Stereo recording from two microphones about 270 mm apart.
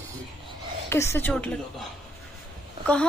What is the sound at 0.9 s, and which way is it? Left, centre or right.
Speech, centre.